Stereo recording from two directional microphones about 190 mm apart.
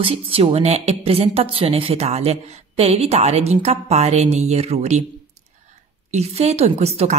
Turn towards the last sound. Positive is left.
turn(degrees=-35)  # may be behind; listen again after turning